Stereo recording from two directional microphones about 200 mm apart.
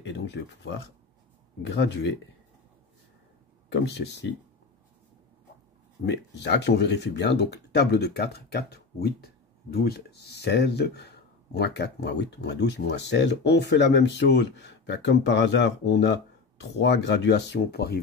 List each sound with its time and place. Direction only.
0.0 s speech: 60° left (ahead or behind)
3.7 s speech: 60° left (ahead or behind)
6.0 s speech: 60° left (ahead or behind)